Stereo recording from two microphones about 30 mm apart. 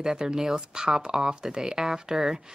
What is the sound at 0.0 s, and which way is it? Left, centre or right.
Speech, right.